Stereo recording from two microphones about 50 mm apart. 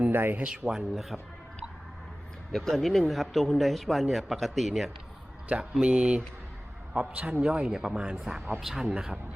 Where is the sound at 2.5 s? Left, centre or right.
Centre.